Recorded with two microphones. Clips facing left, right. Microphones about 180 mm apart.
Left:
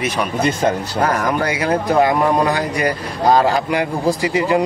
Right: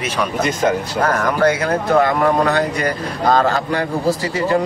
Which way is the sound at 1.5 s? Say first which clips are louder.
Right 1 dB; 10° left (ahead or behind).